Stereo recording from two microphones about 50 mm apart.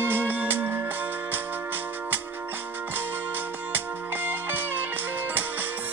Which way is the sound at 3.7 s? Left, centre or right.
Right.